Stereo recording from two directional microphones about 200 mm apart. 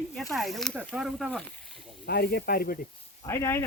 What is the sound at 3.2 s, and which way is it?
Speech, 15° left (ahead or behind).